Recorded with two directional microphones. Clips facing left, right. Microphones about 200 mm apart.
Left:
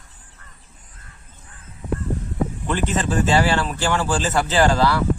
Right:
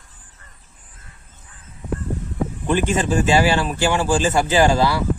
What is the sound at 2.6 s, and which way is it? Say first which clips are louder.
Speech: right 5 dB; 15° right (ahead or behind).